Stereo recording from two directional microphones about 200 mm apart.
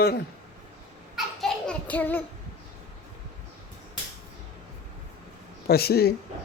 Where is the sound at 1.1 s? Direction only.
5° left (ahead or behind).